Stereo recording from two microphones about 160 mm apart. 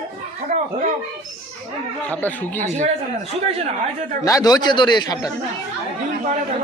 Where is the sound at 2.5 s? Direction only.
45° right (ahead or behind).